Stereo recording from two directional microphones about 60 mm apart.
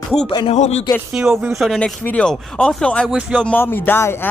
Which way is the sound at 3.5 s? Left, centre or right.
Left.